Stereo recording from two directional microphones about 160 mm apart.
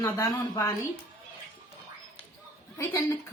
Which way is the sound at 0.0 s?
20° left (ahead or behind).